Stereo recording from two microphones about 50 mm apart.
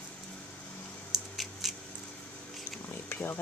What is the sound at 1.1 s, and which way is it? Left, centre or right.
Scissors, centre.